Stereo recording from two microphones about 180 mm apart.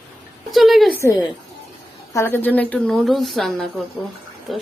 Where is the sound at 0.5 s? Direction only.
Centre (ahead or behind).